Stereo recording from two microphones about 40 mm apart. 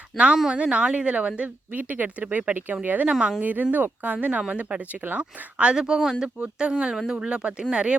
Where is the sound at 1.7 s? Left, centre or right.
Right.